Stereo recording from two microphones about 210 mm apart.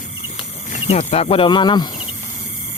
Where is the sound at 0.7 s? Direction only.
30° left (ahead or behind).